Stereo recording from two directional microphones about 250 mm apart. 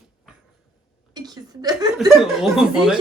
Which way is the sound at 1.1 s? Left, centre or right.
Centre.